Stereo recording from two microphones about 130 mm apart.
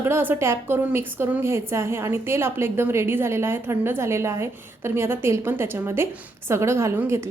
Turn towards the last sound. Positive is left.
turn(degrees=-20)  # may be behind; listen again after turning